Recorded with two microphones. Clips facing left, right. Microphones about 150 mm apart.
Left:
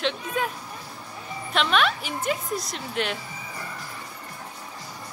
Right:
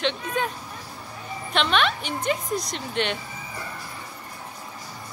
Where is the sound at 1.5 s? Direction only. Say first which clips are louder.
Even; centre (ahead or behind).